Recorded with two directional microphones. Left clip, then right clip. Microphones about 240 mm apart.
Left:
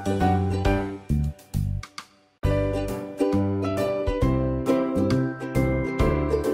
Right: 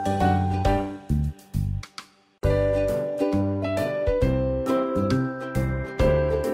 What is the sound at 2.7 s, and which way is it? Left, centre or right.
Music, centre.